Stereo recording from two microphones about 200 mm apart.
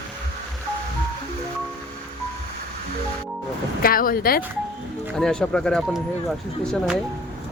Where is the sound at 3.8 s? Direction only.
45° left (ahead or behind).